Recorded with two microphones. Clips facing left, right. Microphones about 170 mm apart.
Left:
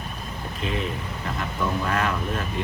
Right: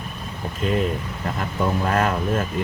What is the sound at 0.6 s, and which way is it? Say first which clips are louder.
Speech: right 6 dB; 45° right (ahead or behind).